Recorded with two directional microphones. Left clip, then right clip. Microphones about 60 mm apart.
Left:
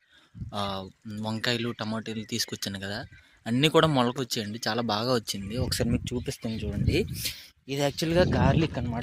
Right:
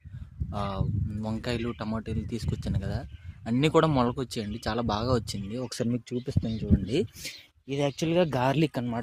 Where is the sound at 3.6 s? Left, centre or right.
Right.